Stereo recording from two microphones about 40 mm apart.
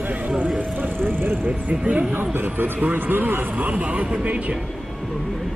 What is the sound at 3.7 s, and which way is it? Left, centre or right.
Speech, right.